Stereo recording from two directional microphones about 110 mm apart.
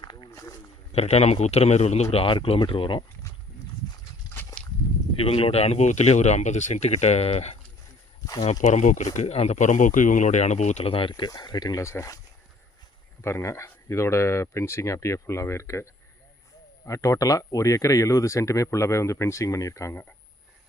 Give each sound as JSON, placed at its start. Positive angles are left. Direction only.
{"t": 0.0, "sound": "walk", "side_deg": 45}
{"t": 0.9, "sound": "a man's voice", "side_deg": 70}
{"t": 2.2, "sound": "speech", "side_deg": 55}
{"t": 5.2, "sound": "speech", "side_deg": 65}
{"t": 8.6, "sound": "speech", "side_deg": 90}
{"t": 11.1, "sound": "speech", "side_deg": 35}
{"t": 13.2, "sound": "speech", "side_deg": 25}